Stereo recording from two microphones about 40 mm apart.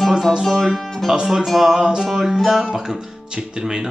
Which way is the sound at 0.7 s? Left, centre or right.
Centre.